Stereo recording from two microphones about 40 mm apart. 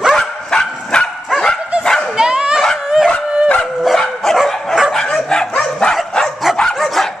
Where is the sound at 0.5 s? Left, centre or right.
Centre.